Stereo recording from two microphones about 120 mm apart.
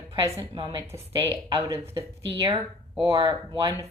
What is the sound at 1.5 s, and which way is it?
Speech, 25° right (ahead or behind).